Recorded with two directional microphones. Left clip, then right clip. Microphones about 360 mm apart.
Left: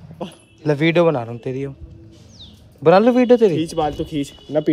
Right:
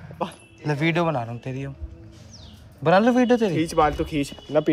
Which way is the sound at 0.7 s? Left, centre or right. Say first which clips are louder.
Left 7 dB; left.